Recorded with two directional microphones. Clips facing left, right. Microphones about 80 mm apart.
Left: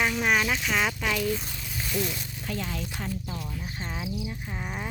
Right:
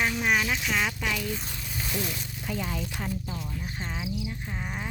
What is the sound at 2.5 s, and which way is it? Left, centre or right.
Speech, centre.